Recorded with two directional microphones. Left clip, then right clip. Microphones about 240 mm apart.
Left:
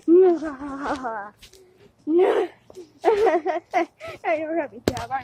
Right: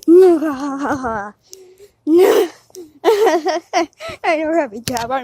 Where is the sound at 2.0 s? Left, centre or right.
Right.